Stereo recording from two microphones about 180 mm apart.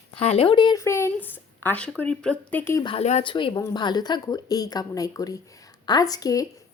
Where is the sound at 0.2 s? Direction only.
35° left (ahead or behind); by 2.8 s 10° left (ahead or behind).